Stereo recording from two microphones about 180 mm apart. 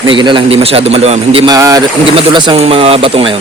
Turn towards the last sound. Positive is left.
turn(degrees=-30)  # may be behind; listen again after turning